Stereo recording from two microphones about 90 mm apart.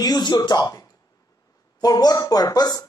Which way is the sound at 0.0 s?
50° left (ahead or behind).